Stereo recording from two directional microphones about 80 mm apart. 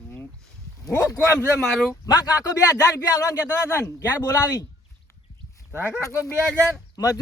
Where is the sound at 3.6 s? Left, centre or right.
Left.